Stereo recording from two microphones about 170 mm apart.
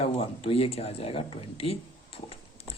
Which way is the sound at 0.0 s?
35° left (ahead or behind).